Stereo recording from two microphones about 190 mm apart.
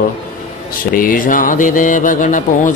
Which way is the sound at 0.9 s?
50° left (ahead or behind).